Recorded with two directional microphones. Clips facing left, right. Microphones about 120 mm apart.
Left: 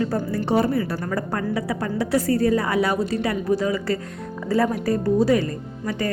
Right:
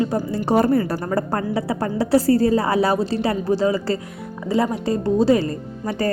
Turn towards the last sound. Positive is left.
turn(degrees=-35)  # may be behind; listen again after turning